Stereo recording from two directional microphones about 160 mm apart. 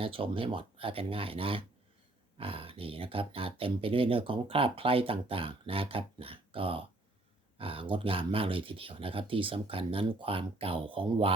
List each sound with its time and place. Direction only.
0.0 s speech: 35° right (ahead or behind)